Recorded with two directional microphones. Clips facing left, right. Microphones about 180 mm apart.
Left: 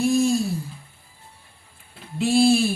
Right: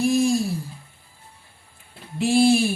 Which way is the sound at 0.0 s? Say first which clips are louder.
Even; 15° right (ahead or behind).